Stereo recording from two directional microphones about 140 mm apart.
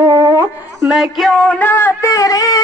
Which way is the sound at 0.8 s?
5° right (ahead or behind).